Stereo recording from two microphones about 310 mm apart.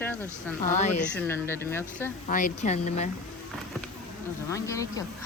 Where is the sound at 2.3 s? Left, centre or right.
Left.